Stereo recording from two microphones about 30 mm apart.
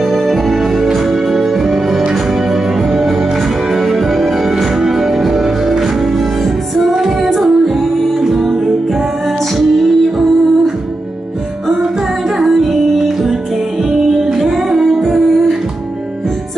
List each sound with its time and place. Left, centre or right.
0.0 s music: centre
6.9 s music: centre
7.2 s music: centre
12.4 s music: centre